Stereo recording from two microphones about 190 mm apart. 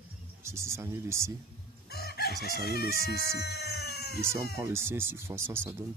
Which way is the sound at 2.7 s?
55° left (ahead or behind).